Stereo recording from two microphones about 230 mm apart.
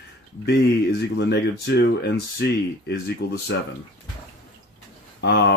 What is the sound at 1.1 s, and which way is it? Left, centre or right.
Speech, left.